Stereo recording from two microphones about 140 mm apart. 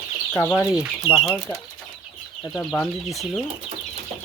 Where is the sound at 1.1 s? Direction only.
40° left (ahead or behind).